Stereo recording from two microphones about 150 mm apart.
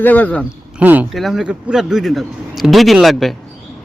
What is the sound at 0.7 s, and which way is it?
Speech, 10° right (ahead or behind).